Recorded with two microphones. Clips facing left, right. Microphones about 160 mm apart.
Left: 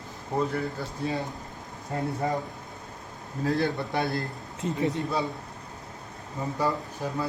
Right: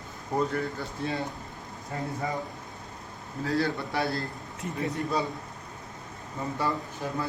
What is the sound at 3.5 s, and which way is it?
A man's voice, 20° left (ahead or behind).